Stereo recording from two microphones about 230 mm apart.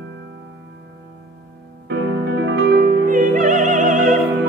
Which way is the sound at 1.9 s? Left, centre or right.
Right.